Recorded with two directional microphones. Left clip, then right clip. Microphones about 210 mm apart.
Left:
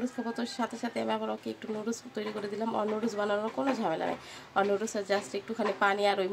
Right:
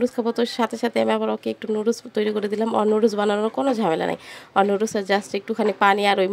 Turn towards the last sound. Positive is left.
turn(degrees=-35)  # may be behind; listen again after turning